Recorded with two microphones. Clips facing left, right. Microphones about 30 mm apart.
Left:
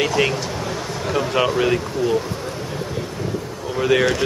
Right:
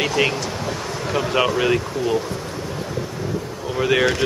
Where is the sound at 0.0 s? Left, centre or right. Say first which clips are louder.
Left 1 dB; centre.